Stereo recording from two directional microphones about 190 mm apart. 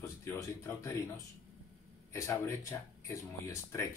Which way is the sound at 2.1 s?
15° left (ahead or behind).